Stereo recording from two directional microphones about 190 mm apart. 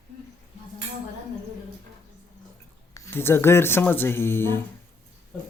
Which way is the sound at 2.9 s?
10° left (ahead or behind).